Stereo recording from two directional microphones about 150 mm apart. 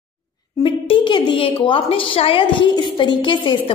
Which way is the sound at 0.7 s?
35° left (ahead or behind).